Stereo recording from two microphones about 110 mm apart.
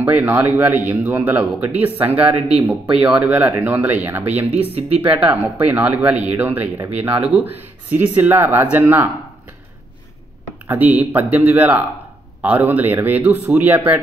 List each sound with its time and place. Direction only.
0.0 s speech: 15° right (ahead or behind)
4.7 s speech: 60° right (ahead or behind)
5.3 s speech: 15° right (ahead or behind)
10.7 s speech: 15° right (ahead or behind)